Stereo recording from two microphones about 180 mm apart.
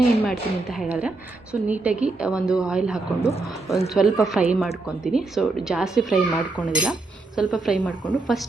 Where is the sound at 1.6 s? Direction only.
10° right (ahead or behind).